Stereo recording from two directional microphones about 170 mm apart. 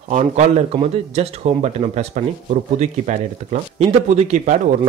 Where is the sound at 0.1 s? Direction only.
45° right (ahead or behind).